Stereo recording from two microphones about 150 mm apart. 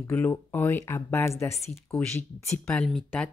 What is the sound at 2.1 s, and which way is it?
Speech, 5° left (ahead or behind).